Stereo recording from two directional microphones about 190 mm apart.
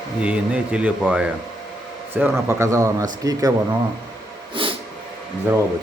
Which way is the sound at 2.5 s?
15° right (ahead or behind).